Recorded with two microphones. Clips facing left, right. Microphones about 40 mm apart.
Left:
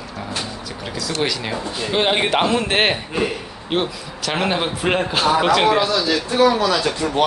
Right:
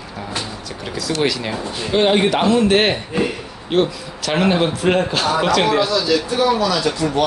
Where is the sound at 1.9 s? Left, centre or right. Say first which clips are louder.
Right 3 dB; centre.